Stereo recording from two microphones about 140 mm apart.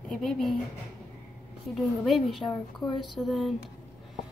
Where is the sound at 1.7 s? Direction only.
Centre (ahead or behind).